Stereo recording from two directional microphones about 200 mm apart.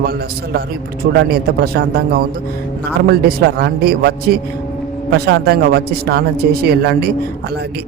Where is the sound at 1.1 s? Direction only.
50° right (ahead or behind).